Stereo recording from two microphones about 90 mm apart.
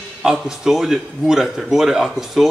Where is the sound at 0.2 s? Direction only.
5° right (ahead or behind).